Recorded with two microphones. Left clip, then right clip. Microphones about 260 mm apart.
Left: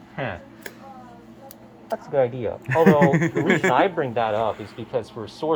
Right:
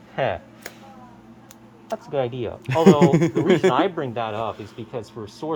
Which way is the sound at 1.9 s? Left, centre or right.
Right.